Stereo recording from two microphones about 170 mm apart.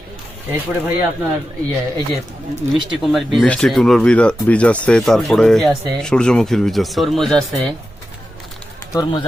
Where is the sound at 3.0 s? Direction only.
Centre (ahead or behind).